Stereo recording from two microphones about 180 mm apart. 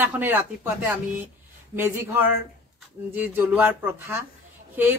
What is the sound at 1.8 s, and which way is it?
A woman's voice, 10° right (ahead or behind).